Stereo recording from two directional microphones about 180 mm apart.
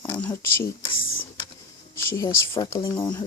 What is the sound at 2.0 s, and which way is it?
Speech, 15° left (ahead or behind).